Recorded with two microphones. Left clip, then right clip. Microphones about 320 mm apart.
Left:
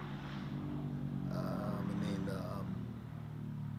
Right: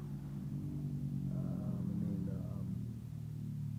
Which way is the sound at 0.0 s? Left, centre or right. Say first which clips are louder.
Left 4 dB; centre.